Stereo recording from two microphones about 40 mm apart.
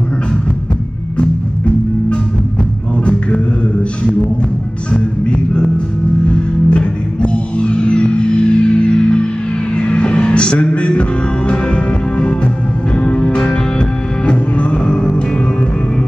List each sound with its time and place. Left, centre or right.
4.9 s music: left